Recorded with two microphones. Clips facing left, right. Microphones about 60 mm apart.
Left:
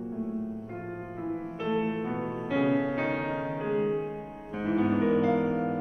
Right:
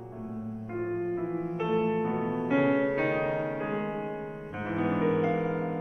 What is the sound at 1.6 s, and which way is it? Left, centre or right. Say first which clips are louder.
Music: right 1 dB; centre.